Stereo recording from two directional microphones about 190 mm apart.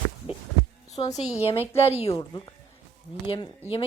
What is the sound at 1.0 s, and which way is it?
A woman's voice, 25° left (ahead or behind).